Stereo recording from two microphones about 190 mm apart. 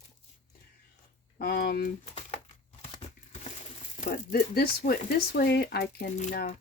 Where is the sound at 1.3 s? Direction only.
55° left (ahead or behind).